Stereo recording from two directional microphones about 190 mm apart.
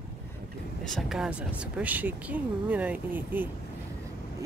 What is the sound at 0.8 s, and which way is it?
Speech, centre (ahead or behind).